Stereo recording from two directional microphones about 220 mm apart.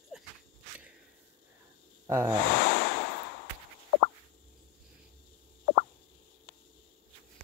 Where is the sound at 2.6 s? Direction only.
50° left (ahead or behind).